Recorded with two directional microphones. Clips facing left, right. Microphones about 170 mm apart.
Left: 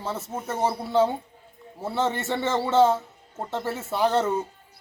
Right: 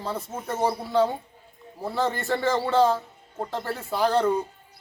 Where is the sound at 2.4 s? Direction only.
25° left (ahead or behind).